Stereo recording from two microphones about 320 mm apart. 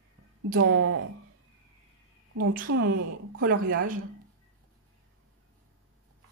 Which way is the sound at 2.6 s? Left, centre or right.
Right.